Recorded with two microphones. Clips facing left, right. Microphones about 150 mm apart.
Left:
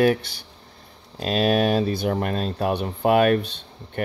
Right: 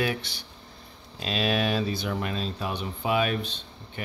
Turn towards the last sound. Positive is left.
turn(degrees=55)  # may be behind; listen again after turning